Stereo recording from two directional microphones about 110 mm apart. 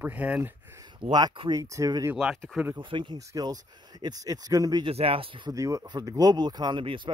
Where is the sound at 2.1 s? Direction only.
5° right (ahead or behind).